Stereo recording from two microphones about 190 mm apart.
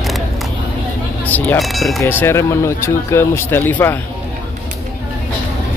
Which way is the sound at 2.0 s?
10° left (ahead or behind).